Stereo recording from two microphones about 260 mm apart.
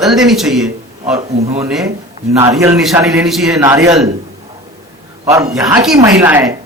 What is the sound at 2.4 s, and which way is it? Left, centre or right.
A man's voice, centre.